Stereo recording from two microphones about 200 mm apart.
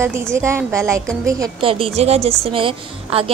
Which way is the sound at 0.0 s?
10° right (ahead or behind).